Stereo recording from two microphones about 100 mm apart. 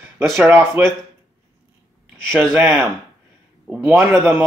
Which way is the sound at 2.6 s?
15° right (ahead or behind).